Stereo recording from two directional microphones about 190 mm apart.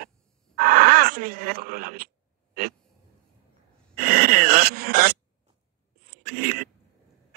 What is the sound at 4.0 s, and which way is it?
Dog, 50° right (ahead or behind).